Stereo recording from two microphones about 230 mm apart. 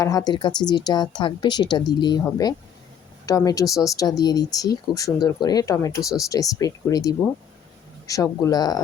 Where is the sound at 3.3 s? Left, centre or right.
Centre.